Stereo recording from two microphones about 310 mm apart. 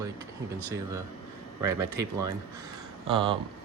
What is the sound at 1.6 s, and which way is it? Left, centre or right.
Speech, centre.